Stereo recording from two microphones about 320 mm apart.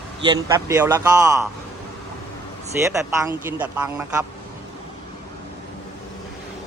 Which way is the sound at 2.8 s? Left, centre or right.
Centre.